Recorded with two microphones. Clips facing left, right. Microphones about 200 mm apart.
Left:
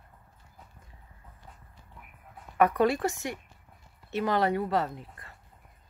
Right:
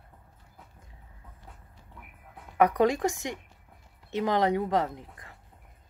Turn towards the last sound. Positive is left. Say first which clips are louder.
# right 1 dB
turn(degrees=-15)  # may be behind; listen again after turning